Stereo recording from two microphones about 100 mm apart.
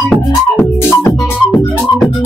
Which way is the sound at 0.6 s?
20° left (ahead or behind).